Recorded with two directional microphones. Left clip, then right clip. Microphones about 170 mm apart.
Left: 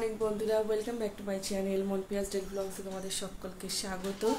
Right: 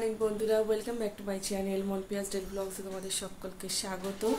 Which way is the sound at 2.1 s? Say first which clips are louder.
Left 1 dB; 10° right (ahead or behind).